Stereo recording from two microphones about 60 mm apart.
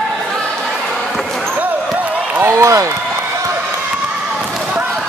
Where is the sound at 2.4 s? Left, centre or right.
Right.